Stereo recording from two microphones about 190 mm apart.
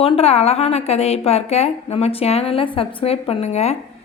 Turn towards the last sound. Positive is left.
turn(degrees=35)  # may be behind; listen again after turning